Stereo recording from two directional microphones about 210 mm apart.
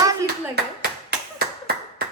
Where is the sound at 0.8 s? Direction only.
50° right (ahead or behind).